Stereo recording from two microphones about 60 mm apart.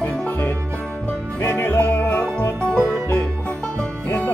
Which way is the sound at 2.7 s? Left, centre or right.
Left.